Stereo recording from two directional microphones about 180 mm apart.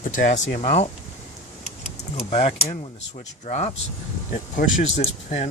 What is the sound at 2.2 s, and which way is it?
Speech, 35° left (ahead or behind).